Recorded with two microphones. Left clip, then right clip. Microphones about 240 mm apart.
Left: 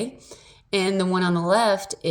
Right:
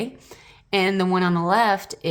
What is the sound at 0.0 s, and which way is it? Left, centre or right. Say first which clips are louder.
A woman's voice: even; right.